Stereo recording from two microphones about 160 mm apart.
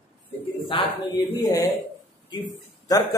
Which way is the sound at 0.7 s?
30° left (ahead or behind).